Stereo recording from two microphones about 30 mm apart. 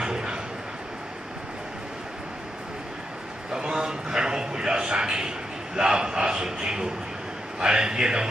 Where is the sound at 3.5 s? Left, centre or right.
Right.